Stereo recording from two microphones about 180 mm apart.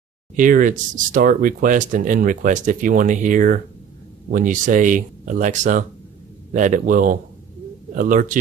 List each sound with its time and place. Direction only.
0.4 s speech: 50° right (ahead or behind)